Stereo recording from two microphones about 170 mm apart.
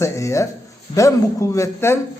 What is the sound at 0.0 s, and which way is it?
A man's voice, 15° left (ahead or behind).